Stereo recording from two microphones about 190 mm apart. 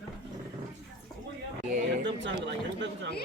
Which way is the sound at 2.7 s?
70° right (ahead or behind).